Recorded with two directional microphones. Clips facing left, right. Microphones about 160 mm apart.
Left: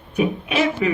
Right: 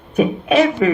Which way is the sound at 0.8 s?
50° right (ahead or behind).